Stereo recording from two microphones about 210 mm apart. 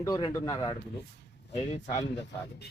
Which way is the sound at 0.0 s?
20° left (ahead or behind).